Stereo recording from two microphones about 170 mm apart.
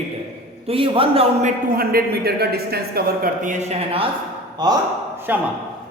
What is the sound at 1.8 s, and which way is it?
Speech, 65° right (ahead or behind).